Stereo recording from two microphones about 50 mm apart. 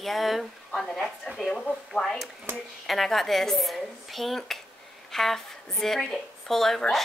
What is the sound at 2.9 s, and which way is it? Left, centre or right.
A woman's voice, centre.